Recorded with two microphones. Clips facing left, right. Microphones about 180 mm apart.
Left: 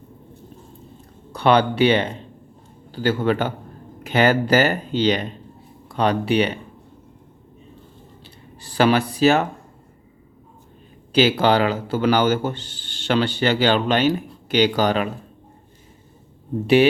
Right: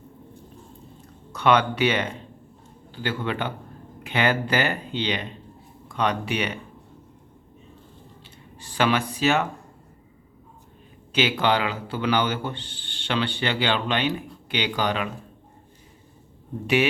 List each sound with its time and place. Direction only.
1.3 s a man's voice: 30° left (ahead or behind)
8.6 s a man's voice: 35° left (ahead or behind)
11.1 s a man's voice: 35° left (ahead or behind)